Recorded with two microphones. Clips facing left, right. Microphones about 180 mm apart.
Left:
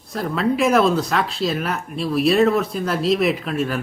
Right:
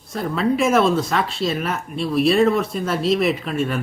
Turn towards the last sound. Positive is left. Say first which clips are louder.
# even
turn(degrees=0)  # may be behind; listen again after turning